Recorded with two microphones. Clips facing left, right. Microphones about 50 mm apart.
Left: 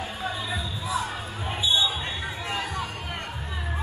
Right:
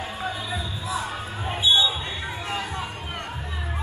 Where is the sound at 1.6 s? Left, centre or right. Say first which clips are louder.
Right 4 dB; right.